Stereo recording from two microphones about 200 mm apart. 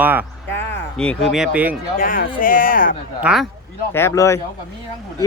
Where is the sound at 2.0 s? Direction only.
45° left (ahead or behind).